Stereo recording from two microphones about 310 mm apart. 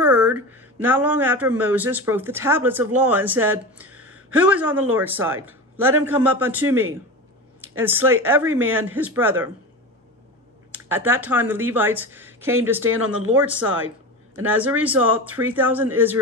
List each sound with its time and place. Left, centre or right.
0.0 s speech: centre
10.7 s speech: centre
13.7 s a sound: right
14.4 s speech: centre